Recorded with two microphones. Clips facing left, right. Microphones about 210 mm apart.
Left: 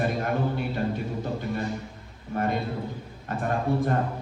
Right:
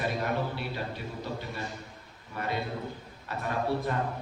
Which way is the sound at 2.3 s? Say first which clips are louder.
Left 6 dB; 45° left (ahead or behind).